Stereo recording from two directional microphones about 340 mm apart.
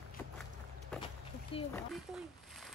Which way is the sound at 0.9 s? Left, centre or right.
Centre.